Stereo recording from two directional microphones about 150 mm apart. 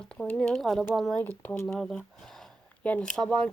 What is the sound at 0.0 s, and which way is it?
Speech, 5° left (ahead or behind).